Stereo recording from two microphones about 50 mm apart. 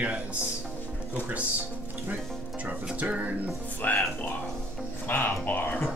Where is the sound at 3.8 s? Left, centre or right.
Left.